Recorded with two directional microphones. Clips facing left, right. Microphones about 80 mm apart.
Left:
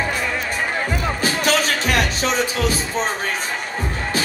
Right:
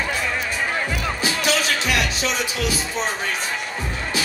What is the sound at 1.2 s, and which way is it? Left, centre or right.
Music, left.